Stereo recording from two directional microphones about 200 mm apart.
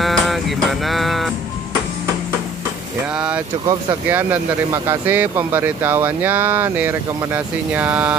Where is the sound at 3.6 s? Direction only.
20° right (ahead or behind).